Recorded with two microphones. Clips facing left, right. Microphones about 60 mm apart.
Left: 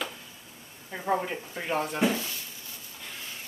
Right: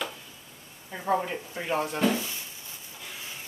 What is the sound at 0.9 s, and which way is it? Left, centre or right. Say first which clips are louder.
Speech: right 1 dB; centre.